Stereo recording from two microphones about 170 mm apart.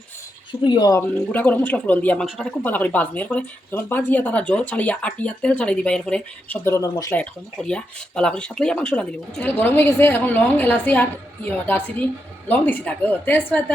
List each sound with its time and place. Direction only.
0.6 s speech: 25° left (ahead or behind)
1.3 s speech: 10° left (ahead or behind)